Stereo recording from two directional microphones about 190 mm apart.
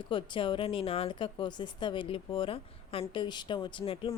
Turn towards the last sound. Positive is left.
turn(degrees=25)  # may be behind; listen again after turning